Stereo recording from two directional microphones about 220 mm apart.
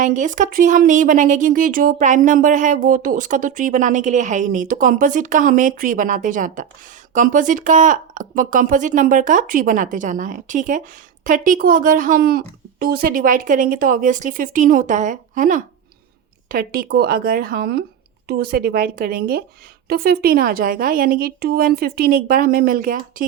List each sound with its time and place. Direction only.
0.0 s speech: 35° right (ahead or behind)